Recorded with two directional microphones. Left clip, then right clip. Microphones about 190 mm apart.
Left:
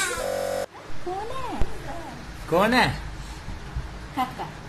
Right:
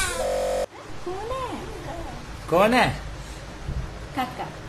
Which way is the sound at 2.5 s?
Centre (ahead or behind).